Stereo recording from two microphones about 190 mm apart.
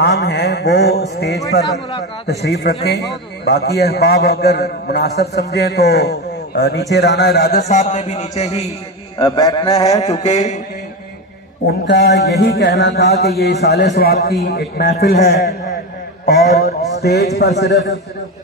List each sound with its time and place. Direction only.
0.0 s a sound: 65° left (ahead or behind)
2.2 s a man's voice: 60° left (ahead or behind)
7.6 s a man's voice: 40° left (ahead or behind)
9.2 s a man's voice: 20° left (ahead or behind)
10.2 s a man's voice: 40° left (ahead or behind)
11.8 s a man's voice: 70° left (ahead or behind)